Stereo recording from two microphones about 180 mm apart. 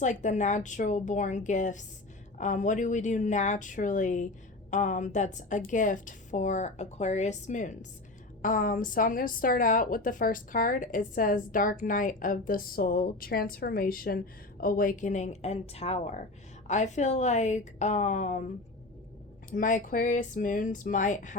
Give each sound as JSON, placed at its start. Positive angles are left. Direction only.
{"t": 0.0, "sound": "a woman's voice", "side_deg": 40}
{"t": 19.5, "sound": "a woman's voice", "side_deg": 45}